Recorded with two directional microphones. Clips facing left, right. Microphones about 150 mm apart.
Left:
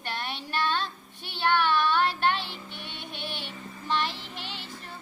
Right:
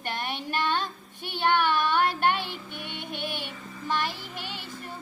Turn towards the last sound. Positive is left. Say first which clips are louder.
# right 2 dB
turn(degrees=-45)  # may be behind; listen again after turning